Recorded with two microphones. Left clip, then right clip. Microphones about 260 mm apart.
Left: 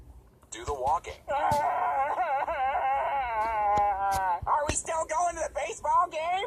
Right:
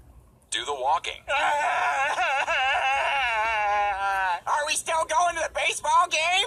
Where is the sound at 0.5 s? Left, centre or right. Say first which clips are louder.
Right 4 dB; right.